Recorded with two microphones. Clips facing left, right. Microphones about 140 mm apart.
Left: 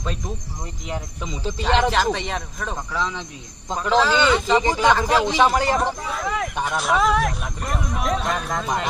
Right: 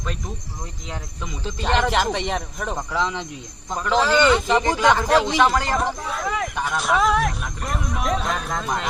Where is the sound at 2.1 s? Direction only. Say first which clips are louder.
Right 2 dB; 15° right (ahead or behind).